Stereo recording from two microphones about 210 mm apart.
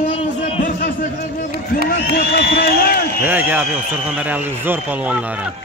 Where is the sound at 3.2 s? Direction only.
10° right (ahead or behind).